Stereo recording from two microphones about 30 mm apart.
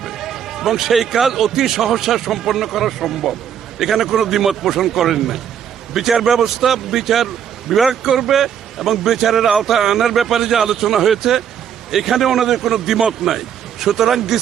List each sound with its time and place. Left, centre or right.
0.0 s speech: centre